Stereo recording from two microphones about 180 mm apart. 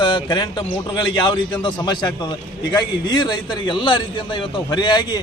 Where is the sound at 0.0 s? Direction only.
25° left (ahead or behind).